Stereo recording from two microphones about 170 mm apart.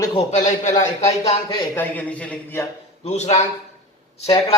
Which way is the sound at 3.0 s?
40° left (ahead or behind).